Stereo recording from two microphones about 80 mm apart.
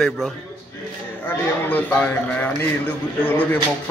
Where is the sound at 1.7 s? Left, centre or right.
Left.